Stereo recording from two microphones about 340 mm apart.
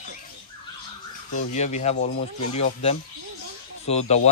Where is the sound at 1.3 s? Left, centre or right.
Left.